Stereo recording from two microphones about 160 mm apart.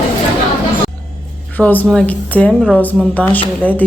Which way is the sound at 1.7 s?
10° left (ahead or behind).